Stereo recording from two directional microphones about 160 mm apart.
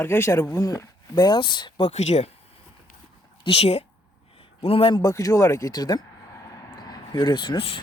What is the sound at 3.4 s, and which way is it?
Speech, 40° left (ahead or behind).